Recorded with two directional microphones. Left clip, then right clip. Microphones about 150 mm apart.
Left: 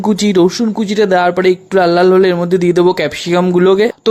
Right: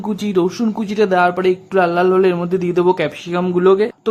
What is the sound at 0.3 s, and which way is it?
Speech, 25° left (ahead or behind).